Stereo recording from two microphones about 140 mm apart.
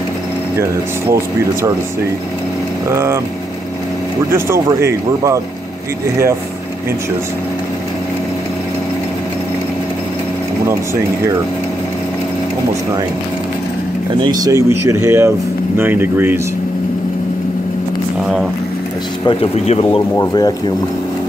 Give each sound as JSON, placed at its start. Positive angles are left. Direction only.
{"t": 2.9, "sound": "speech", "side_deg": -20}
{"t": 4.3, "sound": "speech", "side_deg": -20}
{"t": 14.2, "sound": "speech", "side_deg": -25}
{"t": 18.2, "sound": "speech", "side_deg": -5}
{"t": 19.2, "sound": "speech", "side_deg": 45}
{"t": 20.2, "sound": "speech", "side_deg": 30}